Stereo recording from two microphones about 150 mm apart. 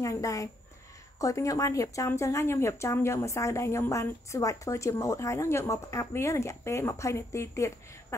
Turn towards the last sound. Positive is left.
turn(degrees=20)  # may be behind; listen again after turning